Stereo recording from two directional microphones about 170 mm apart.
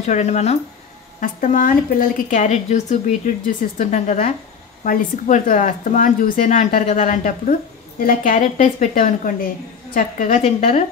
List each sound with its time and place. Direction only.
0.0 s speech: 40° left (ahead or behind)
1.2 s a woman's voice: 50° left (ahead or behind)